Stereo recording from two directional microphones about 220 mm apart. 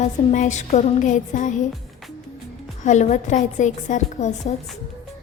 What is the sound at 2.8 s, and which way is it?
A woman's voice, 35° left (ahead or behind).